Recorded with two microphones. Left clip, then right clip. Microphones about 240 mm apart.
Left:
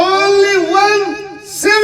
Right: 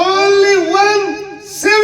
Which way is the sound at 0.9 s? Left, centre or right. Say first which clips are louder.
Even; left.